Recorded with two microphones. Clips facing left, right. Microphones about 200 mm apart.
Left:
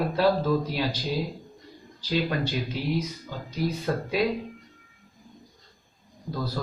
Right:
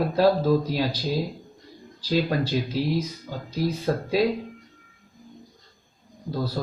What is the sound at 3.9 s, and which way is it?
Speech, 35° right (ahead or behind).